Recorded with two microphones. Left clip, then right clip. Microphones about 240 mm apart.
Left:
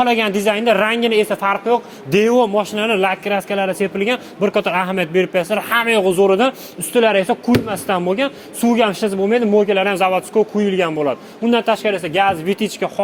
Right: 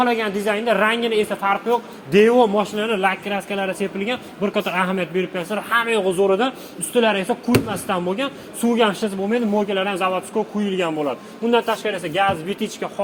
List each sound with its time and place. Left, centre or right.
0.0 s a woman's voice: left